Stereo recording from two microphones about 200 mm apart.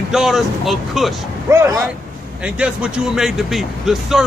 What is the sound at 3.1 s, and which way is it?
Speech, centre (ahead or behind).